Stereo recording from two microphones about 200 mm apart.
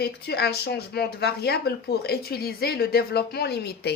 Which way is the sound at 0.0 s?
55° left (ahead or behind).